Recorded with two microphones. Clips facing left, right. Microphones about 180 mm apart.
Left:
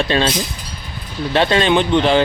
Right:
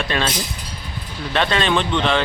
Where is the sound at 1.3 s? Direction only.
30° left (ahead or behind).